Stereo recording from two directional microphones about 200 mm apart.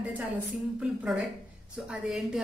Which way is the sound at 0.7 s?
5° right (ahead or behind).